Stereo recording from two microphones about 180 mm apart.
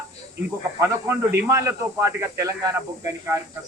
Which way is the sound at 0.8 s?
15° right (ahead or behind).